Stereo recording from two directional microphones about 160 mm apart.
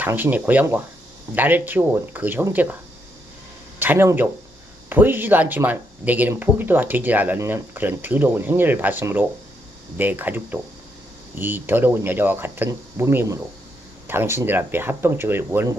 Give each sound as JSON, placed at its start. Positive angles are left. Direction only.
{"t": 0.0, "sound": "speech", "side_deg": -10}
{"t": 3.8, "sound": "speech", "side_deg": -15}